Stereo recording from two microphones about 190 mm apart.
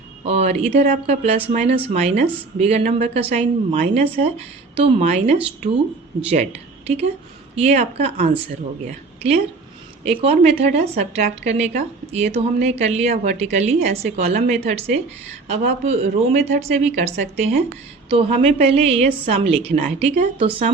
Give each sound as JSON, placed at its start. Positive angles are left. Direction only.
{"t": 0.3, "sound": "a woman's voice", "side_deg": -35}
{"t": 18.7, "sound": "a woman's voice", "side_deg": -30}